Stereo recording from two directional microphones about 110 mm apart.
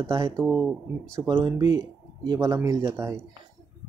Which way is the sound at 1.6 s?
40° right (ahead or behind).